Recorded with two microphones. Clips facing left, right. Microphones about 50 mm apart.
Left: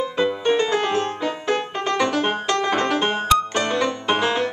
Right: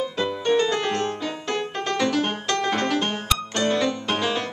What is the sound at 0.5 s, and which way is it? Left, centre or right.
Music, centre.